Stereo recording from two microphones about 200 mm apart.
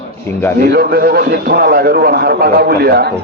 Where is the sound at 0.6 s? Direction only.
50° right (ahead or behind).